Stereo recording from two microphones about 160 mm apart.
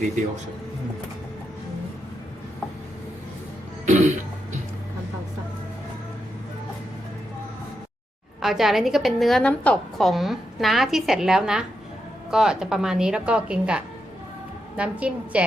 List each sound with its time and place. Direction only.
3.8 s cough: 50° right (ahead or behind)
8.4 s a woman's voice: centre (ahead or behind)